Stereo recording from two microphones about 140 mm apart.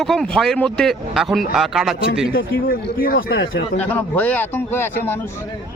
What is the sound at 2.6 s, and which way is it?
Speech, 90° left.